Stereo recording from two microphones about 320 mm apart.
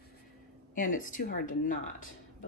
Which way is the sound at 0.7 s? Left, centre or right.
Left.